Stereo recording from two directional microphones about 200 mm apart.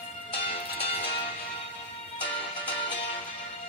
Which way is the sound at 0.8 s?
30° left (ahead or behind).